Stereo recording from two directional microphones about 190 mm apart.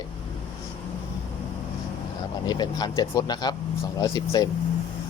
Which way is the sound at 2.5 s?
20° left (ahead or behind).